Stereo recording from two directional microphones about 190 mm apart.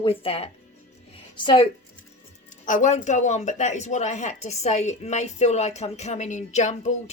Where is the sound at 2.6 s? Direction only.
40° left (ahead or behind).